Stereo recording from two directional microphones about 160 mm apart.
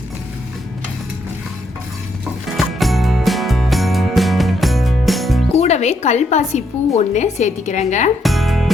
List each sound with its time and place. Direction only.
2.6 s music: centre (ahead or behind)
5.5 s a woman's voice: 45° left (ahead or behind)
8.2 s music: centre (ahead or behind)